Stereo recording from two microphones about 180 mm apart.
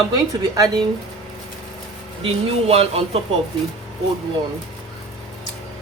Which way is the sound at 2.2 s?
35° right (ahead or behind).